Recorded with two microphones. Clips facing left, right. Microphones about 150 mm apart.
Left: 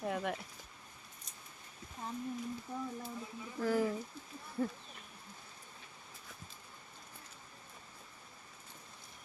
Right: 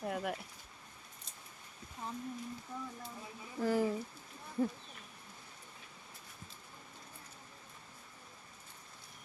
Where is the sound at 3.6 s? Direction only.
10° right (ahead or behind).